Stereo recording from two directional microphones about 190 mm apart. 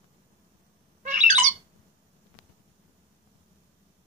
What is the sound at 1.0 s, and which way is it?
Squawk, 40° right (ahead or behind).